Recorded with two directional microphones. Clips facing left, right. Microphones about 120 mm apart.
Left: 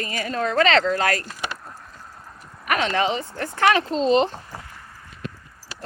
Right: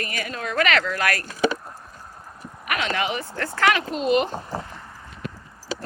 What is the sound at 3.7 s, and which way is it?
Speech, 30° left (ahead or behind).